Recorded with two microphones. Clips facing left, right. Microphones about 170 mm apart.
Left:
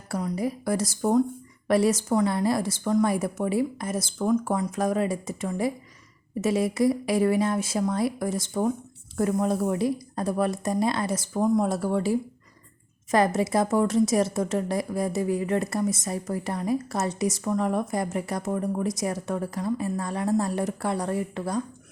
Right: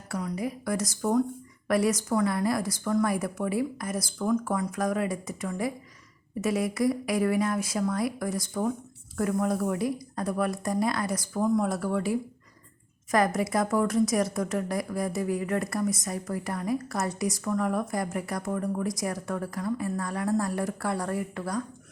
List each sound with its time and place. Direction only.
0.1 s a woman's voice: 30° left (ahead or behind)